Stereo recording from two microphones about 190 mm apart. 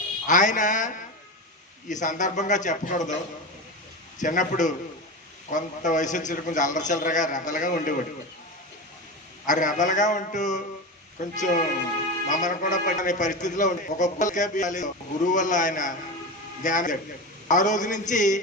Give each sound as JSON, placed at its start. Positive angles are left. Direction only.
{"t": 0.3, "sound": "a woman's voice", "side_deg": 40}
{"t": 1.9, "sound": "a man's voice", "side_deg": 40}
{"t": 4.2, "sound": "a man's voice", "side_deg": 40}
{"t": 9.5, "sound": "a man's voice", "side_deg": 40}